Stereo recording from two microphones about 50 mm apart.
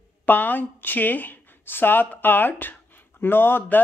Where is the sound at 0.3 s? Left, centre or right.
Left.